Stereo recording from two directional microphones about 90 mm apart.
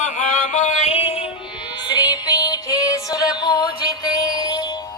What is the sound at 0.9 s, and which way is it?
Music, 90° left.